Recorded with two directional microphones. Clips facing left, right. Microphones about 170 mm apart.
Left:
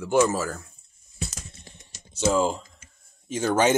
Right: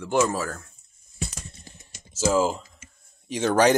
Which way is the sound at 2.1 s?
5° right (ahead or behind).